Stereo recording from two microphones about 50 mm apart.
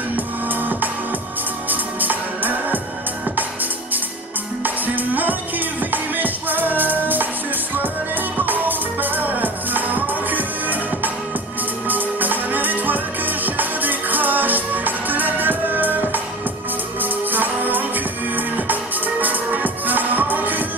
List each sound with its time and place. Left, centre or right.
0.1 s music: right
4.6 s music: right
8.5 s music: right